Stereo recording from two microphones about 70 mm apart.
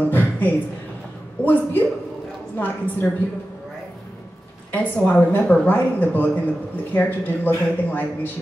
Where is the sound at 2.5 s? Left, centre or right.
Left.